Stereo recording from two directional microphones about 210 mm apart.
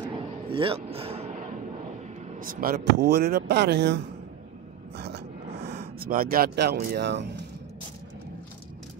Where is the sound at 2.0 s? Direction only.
40° right (ahead or behind).